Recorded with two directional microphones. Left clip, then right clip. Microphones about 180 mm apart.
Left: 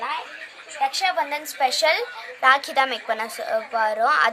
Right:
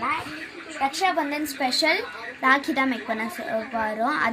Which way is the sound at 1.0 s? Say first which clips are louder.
Left 1 dB; 25° left (ahead or behind).